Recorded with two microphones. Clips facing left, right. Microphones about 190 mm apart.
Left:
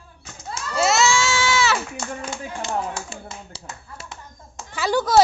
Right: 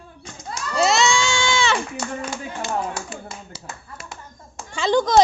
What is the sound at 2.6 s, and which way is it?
Speech, 25° left (ahead or behind).